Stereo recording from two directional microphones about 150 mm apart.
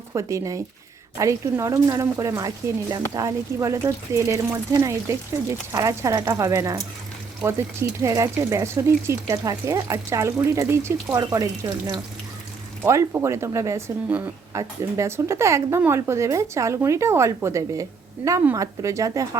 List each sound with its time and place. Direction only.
0.1 s speech: 20° right (ahead or behind)
12.8 s speech: 15° right (ahead or behind)